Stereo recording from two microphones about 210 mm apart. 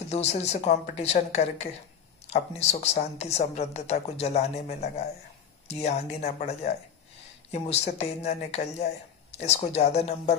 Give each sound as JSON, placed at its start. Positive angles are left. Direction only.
{"t": 0.1, "sound": "a woman's voice", "side_deg": 30}